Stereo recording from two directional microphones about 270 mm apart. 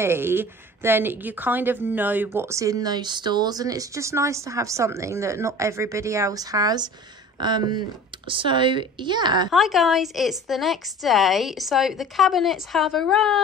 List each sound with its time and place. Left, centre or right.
0.0 s speech: centre
9.5 s a woman's voice: centre